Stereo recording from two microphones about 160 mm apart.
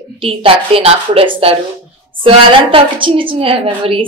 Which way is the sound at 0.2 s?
35° right (ahead or behind).